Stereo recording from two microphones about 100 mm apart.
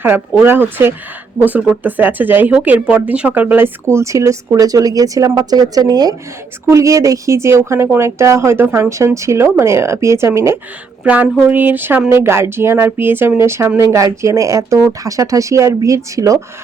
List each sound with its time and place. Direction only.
0.4 s speech: 20° right (ahead or behind)
11.0 s speech: 15° right (ahead or behind); by 16.4 s 35° right (ahead or behind)